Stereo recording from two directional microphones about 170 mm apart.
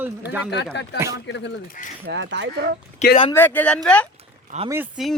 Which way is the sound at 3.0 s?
45° left (ahead or behind).